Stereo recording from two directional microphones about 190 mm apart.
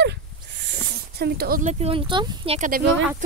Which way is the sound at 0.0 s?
65° right (ahead or behind).